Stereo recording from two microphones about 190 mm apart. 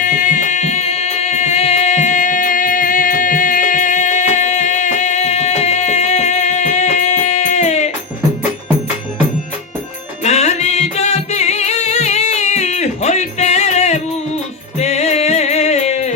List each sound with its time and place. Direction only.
0.0 s music: 40° left (ahead or behind)
10.2 s music: 35° left (ahead or behind)